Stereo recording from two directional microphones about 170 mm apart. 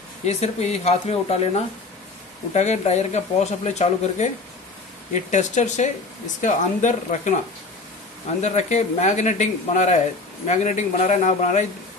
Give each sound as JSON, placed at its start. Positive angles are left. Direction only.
{"t": 0.2, "sound": "speech", "side_deg": 40}
{"t": 8.4, "sound": "speech", "side_deg": 45}